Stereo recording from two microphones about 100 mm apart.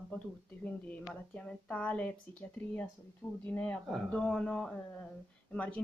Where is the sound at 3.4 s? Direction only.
15° left (ahead or behind).